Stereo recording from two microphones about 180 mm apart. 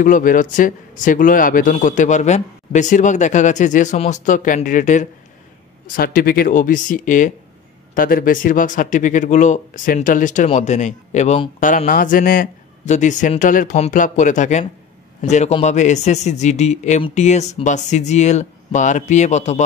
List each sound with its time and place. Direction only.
0.0 s speech: 50° left (ahead or behind)